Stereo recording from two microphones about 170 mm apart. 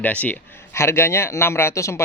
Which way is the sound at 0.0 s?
10° left (ahead or behind).